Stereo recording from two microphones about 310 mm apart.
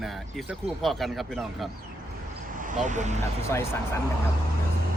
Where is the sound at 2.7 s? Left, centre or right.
Right.